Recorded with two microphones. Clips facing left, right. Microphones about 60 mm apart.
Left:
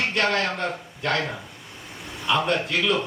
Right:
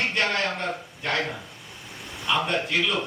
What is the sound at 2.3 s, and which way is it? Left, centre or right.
Speech, centre.